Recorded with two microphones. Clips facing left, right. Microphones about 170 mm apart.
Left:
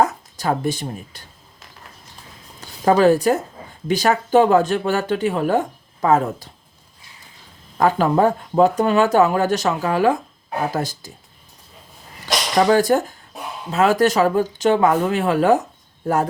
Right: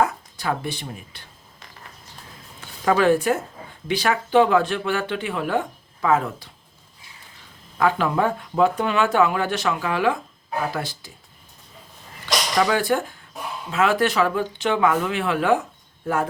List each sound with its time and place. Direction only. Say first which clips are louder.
0.0 s speech: left 3 dB; 40° left (ahead or behind)
2.6 s speech: left 5 dB; 35° left (ahead or behind)
7.8 s speech: left 4 dB; 40° left (ahead or behind)
12.5 s speech: left 6 dB; 40° left (ahead or behind)